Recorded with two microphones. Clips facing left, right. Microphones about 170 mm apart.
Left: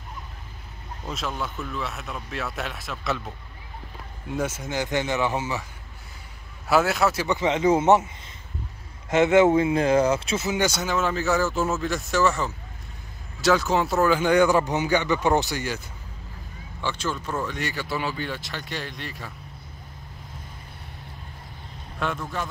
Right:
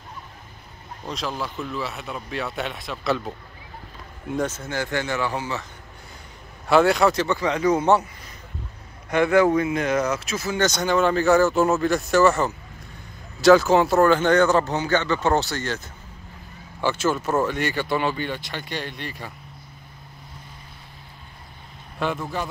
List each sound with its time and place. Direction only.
1.0 s speech: centre (ahead or behind)
4.4 s speech: 10° left (ahead or behind)
6.7 s speech: 5° left (ahead or behind)
7.2 s speech: 20° left (ahead or behind)
9.1 s speech: 20° left (ahead or behind)
10.7 s speech: 5° left (ahead or behind)
11.5 s speech: 65° right (ahead or behind)
11.8 s speech: centre (ahead or behind)
13.4 s speech: centre (ahead or behind)
17.1 s speech: 45° right (ahead or behind)
18.1 s speech: centre (ahead or behind)
22.0 s speech: centre (ahead or behind)